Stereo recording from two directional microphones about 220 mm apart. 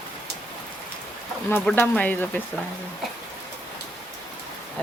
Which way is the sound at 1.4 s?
10° left (ahead or behind).